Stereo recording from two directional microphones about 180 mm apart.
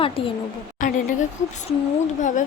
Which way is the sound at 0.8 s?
45° left (ahead or behind).